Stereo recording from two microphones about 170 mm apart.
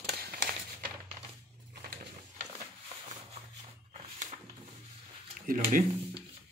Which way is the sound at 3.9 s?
45° right (ahead or behind).